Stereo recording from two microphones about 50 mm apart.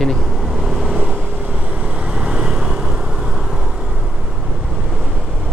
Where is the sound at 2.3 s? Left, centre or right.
Centre.